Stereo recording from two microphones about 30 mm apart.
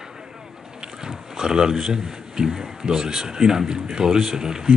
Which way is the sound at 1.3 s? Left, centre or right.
Centre.